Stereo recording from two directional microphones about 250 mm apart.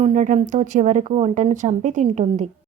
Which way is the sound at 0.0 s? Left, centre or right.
Right.